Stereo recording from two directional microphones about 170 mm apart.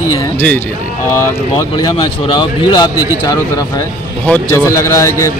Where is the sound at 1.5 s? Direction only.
25° left (ahead or behind).